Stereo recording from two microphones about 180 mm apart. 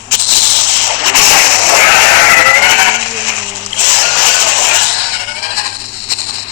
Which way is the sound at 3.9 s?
50° left (ahead or behind).